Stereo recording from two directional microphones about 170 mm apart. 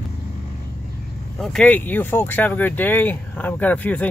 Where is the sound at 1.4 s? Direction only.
5° left (ahead or behind).